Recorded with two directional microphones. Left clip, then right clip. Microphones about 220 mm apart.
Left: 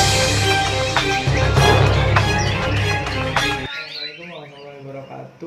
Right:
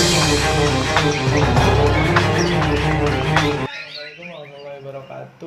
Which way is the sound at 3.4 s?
Centre (ahead or behind).